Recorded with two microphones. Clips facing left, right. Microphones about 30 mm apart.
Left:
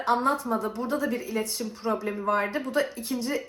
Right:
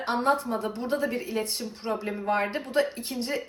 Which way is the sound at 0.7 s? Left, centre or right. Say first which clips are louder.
Even; right.